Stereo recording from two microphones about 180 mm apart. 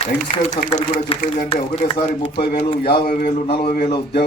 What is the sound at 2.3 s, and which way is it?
A man's voice, 60° left (ahead or behind).